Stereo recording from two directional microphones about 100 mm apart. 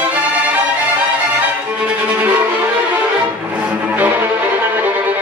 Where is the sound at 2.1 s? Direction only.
20° right (ahead or behind).